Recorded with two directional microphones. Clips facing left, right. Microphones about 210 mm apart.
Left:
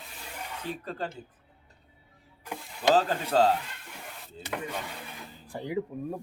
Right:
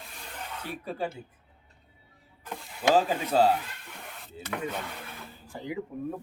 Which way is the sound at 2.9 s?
10° right (ahead or behind).